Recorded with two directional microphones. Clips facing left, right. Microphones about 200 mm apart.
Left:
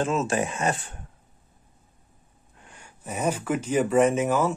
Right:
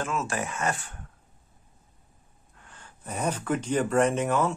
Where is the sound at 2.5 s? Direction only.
15° left (ahead or behind).